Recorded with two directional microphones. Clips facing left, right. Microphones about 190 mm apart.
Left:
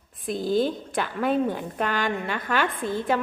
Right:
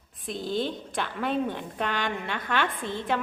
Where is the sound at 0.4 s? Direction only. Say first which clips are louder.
Left 6 dB; 40° left (ahead or behind).